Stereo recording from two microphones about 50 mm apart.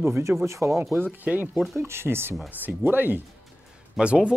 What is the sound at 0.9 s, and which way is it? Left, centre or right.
Speech, right.